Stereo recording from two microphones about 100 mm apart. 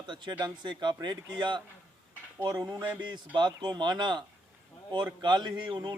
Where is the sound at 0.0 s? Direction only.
50° right (ahead or behind).